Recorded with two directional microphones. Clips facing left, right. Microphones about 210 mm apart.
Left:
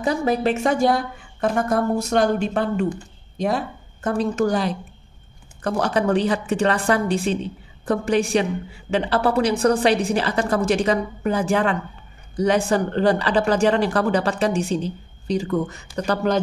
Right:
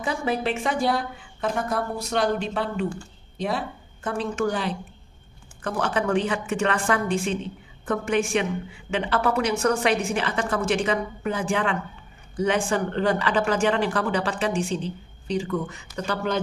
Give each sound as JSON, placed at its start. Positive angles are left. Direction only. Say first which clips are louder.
{"t": 0.0, "sound": "a woman's voice", "louder": "left 5 dB", "side_deg": 40}